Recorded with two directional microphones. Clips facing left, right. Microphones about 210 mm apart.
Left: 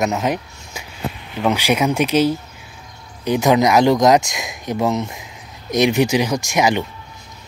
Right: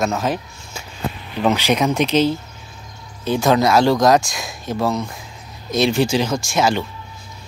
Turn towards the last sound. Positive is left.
turn(degrees=15)  # may be behind; listen again after turning